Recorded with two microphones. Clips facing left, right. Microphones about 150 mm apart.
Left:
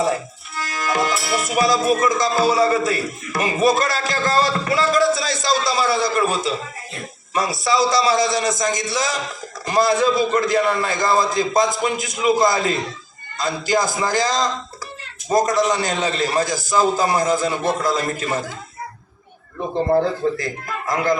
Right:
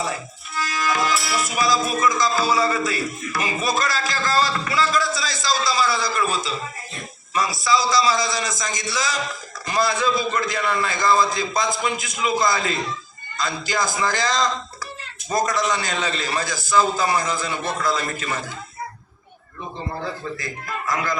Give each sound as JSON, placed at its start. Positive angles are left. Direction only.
{"t": 0.6, "sound": "music", "side_deg": 55}
{"t": 9.6, "sound": "a man's voice", "side_deg": 45}
{"t": 15.3, "sound": "a man's voice", "side_deg": 45}
{"t": 19.5, "sound": "a man's voice", "side_deg": 50}